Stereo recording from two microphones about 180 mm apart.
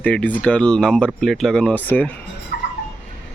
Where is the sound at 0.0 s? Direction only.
10° left (ahead or behind).